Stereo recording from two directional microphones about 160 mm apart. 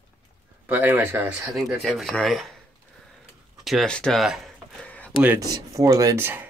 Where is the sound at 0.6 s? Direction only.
10° right (ahead or behind).